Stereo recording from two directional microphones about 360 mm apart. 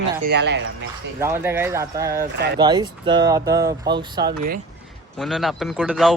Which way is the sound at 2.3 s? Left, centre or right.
Right.